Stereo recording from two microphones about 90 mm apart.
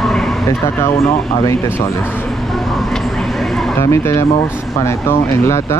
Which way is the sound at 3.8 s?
30° left (ahead or behind).